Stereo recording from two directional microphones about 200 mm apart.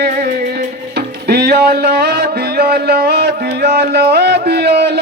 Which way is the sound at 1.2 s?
55° right (ahead or behind).